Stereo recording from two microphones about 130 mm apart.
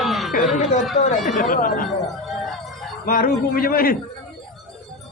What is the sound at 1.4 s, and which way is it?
Speech, 90° left.